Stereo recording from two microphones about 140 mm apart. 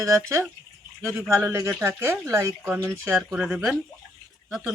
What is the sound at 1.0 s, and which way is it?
Speech, 20° right (ahead or behind).